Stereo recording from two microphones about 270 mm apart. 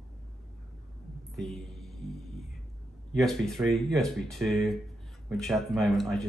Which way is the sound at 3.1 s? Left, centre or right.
Centre.